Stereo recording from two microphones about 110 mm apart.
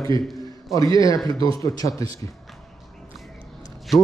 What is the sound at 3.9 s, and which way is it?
Speech, centre (ahead or behind).